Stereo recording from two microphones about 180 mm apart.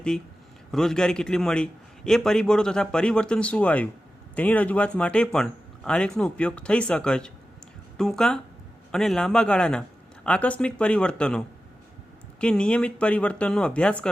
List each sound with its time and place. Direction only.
0.7 s a man's voice: 5° left (ahead or behind)